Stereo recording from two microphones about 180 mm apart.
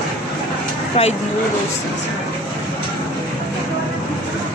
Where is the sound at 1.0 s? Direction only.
35° left (ahead or behind).